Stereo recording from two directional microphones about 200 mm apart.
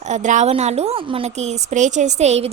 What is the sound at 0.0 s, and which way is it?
A woman's voice, 35° right (ahead or behind).